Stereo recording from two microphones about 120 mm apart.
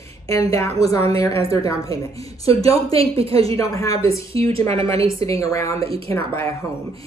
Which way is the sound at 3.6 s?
30° left (ahead or behind).